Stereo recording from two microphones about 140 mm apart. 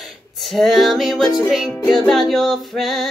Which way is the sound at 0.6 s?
Centre (ahead or behind).